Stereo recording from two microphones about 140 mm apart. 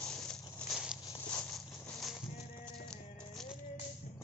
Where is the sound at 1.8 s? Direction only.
Centre (ahead or behind).